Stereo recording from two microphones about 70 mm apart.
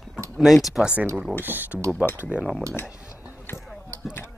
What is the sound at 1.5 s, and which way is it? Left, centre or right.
Speech, right.